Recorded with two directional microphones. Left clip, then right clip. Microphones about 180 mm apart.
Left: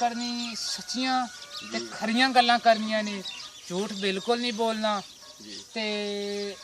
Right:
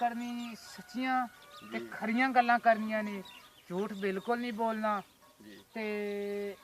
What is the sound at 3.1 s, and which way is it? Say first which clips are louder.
Speech: left 9 dB; 45° right (ahead or behind).